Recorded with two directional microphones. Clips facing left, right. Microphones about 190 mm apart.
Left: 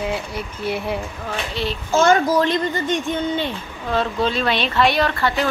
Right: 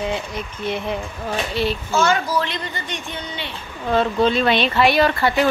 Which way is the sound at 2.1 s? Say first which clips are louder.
Left 5 dB; 45° left (ahead or behind).